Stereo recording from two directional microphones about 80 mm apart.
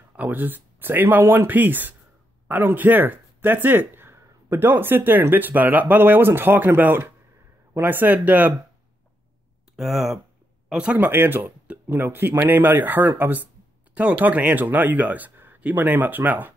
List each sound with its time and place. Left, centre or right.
0.1 s speech: right
9.8 s speech: centre
11.1 s speech: right